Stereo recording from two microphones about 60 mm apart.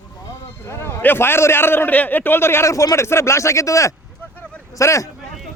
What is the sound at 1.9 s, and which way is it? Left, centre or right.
Speech, left.